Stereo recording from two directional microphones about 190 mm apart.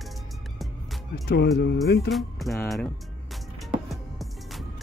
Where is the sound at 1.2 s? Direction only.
60° left (ahead or behind).